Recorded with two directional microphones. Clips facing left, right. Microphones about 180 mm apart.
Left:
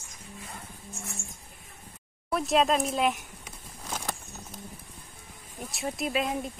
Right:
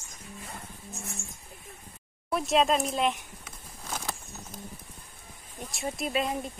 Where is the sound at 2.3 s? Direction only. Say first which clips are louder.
Even; centre (ahead or behind).